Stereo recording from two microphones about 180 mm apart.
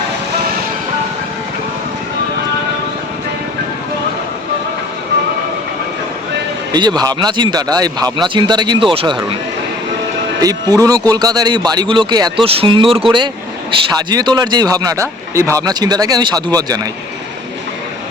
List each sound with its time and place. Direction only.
6.7 s speech: 25° right (ahead or behind)
10.4 s speech: 20° right (ahead or behind)